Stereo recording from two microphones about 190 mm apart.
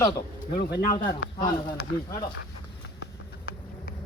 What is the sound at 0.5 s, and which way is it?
Speech, 60° left (ahead or behind).